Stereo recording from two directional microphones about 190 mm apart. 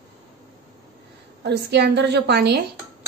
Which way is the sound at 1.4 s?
60° right (ahead or behind).